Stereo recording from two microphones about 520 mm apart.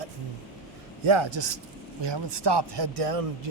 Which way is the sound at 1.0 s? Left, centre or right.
Right.